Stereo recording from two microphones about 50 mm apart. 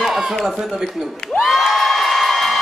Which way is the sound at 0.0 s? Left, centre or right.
Centre.